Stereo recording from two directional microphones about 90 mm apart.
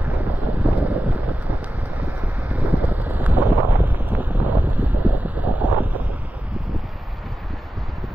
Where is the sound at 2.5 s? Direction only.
15° right (ahead or behind).